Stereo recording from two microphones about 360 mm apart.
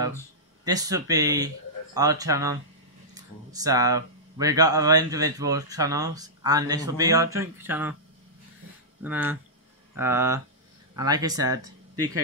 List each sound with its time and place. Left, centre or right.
0.7 s speech: centre
9.0 s speech: centre
11.9 s speech: right